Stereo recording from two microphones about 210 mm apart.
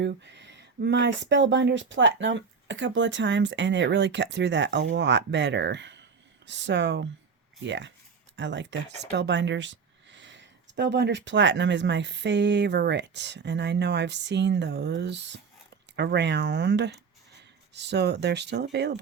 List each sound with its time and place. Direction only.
0.0 s speech: 60° right (ahead or behind)